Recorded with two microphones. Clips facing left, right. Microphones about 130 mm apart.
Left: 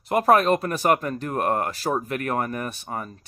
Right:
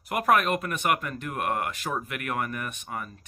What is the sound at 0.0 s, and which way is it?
Speech, 30° left (ahead or behind).